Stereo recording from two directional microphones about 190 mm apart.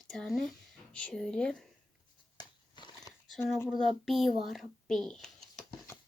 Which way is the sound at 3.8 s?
Centre (ahead or behind).